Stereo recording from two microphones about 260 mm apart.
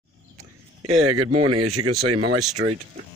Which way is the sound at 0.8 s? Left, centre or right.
Right.